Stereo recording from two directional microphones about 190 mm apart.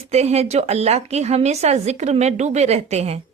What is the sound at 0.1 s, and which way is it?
A woman's voice, 35° right (ahead or behind).